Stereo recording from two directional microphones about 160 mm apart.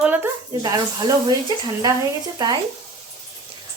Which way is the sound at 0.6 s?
20° right (ahead or behind).